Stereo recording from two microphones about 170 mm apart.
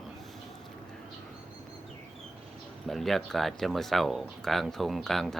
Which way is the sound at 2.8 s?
Centre (ahead or behind).